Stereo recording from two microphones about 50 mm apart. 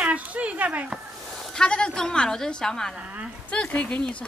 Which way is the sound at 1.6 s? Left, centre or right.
Centre.